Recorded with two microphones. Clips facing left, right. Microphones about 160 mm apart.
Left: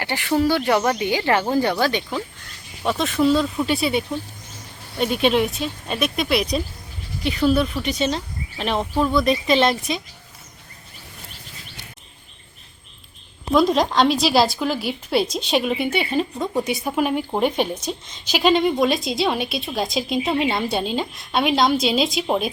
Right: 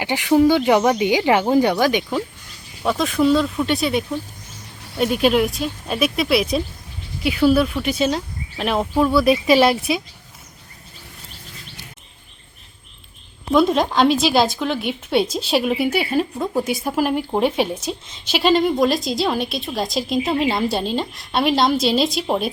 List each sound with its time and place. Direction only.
0.0 s speech: 15° right (ahead or behind)
2.8 s a woman's voice: centre (ahead or behind)
13.5 s a woman's voice: centre (ahead or behind)